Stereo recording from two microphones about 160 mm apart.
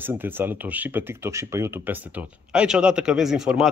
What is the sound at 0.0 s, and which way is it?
Speech, 15° right (ahead or behind).